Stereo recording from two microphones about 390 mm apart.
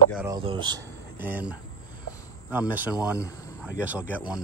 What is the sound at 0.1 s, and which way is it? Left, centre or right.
Speech, centre.